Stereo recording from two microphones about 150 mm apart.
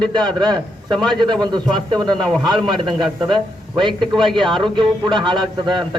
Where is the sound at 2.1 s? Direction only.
5° left (ahead or behind).